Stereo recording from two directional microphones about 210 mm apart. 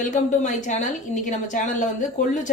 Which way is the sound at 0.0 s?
35° left (ahead or behind).